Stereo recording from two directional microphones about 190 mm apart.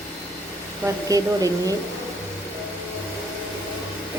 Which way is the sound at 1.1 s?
20° right (ahead or behind).